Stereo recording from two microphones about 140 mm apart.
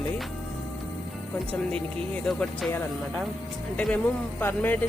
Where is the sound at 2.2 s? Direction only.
5° left (ahead or behind).